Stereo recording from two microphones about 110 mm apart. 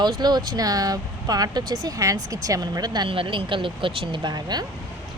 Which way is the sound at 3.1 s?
50° right (ahead or behind).